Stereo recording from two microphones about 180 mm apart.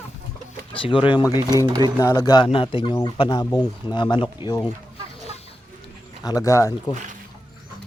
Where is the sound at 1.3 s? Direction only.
20° right (ahead or behind).